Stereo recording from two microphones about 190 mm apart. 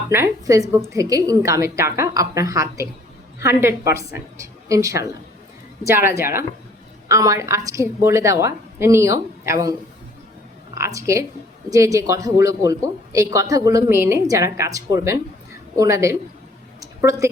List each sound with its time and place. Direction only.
0.1 s speech: 15° right (ahead or behind)
10.8 s speech: 15° right (ahead or behind)
16.8 s a sound: 15° right (ahead or behind)